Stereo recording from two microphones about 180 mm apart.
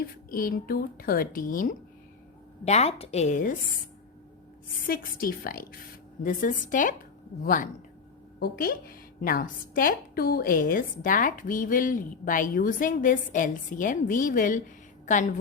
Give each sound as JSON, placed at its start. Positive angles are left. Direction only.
{"t": 0.0, "sound": "a woman's voice", "side_deg": 50}
{"t": 2.6, "sound": "a woman's voice", "side_deg": 35}
{"t": 4.9, "sound": "a woman's voice", "side_deg": 55}